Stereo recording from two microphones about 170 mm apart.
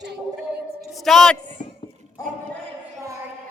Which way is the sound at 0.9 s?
Centre (ahead or behind).